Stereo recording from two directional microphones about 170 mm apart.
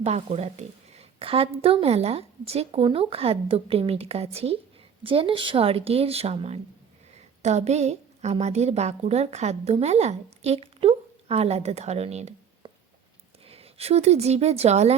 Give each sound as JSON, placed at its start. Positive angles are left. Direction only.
{"t": 0.0, "sound": "a woman's voice", "side_deg": -40}